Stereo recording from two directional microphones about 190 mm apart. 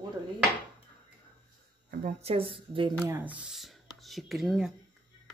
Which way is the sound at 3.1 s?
10° right (ahead or behind).